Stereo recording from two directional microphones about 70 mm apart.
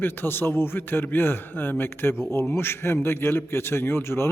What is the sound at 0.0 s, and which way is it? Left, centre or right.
A man's voice, left.